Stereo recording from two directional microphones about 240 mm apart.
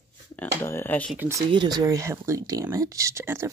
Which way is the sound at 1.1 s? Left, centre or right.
Centre.